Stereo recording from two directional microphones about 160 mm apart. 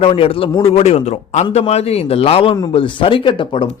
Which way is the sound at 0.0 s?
35° left (ahead or behind).